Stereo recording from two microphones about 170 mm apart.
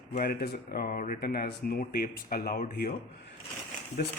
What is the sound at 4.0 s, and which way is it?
Speech, 65° left (ahead or behind).